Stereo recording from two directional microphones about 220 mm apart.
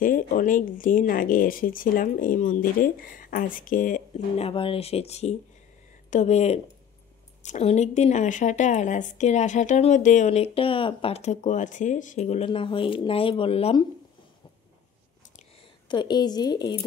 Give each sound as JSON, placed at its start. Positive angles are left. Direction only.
{"t": 0.0, "sound": "speech", "side_deg": 40}
{"t": 15.9, "sound": "a woman's voice", "side_deg": 20}